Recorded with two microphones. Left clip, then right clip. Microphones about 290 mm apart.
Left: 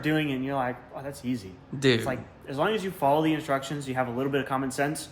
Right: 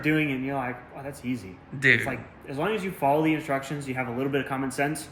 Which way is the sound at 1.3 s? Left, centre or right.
Centre.